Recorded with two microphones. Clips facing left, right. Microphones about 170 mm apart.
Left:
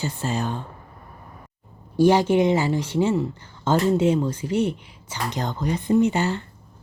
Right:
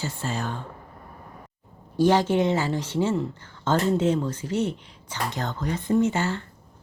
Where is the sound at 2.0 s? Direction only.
10° left (ahead or behind).